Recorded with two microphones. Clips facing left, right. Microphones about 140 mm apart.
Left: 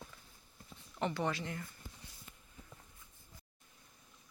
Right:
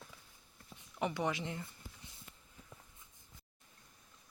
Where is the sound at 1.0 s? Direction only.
15° right (ahead or behind).